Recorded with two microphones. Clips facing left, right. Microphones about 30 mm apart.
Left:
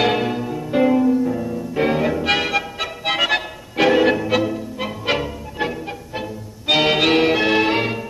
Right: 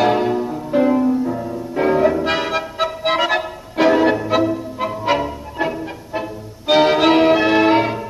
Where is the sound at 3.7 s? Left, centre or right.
Left.